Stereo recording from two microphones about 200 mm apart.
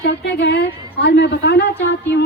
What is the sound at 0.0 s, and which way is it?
A woman's voice, 60° left (ahead or behind).